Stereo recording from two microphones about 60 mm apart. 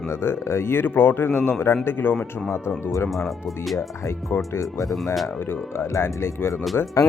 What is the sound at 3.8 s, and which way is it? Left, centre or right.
Speech, left.